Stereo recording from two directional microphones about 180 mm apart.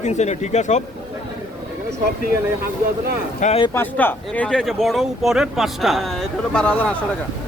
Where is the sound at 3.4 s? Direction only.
35° left (ahead or behind).